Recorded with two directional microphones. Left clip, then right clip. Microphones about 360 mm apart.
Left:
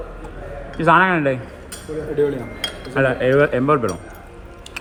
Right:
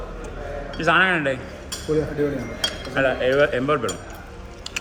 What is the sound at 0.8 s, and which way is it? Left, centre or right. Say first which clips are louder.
Speech: left 4 dB; centre.